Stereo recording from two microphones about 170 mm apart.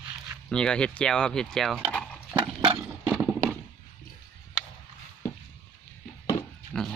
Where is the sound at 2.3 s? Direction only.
30° right (ahead or behind).